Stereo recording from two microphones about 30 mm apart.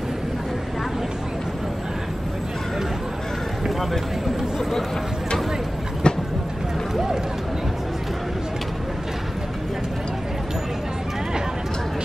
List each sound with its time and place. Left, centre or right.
6.0 s vehicle: left